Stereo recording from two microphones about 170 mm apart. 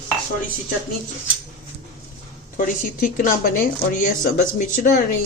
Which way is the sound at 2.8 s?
50° left (ahead or behind).